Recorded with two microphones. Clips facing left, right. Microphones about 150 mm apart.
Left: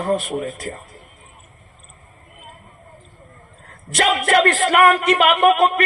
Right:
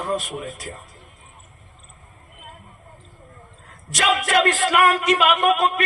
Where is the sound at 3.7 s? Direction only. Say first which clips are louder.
Left 2 dB; 55° left (ahead or behind).